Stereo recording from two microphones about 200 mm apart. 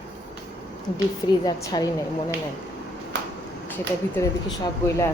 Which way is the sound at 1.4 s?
20° left (ahead or behind).